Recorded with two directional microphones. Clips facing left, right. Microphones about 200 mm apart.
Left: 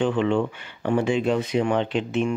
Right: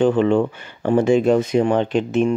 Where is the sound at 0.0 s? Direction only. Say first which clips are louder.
Right 6 dB; 40° right (ahead or behind).